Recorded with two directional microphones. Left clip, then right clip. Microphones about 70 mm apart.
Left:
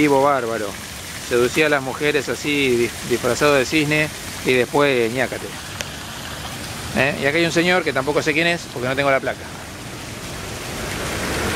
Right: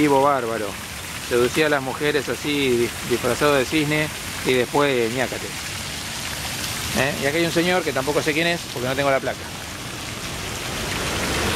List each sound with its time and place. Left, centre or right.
0.0 s speech: left
5.0 s speech: centre
7.0 s speech: left
8.2 s speech: centre